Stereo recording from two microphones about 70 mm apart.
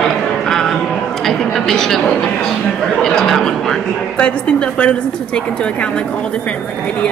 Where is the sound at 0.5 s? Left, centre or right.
Centre.